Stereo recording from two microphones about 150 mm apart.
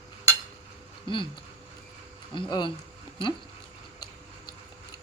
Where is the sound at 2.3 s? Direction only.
35° left (ahead or behind).